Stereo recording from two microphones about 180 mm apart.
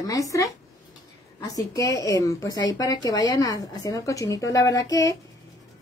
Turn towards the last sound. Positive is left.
turn(degrees=20)  # may be behind; listen again after turning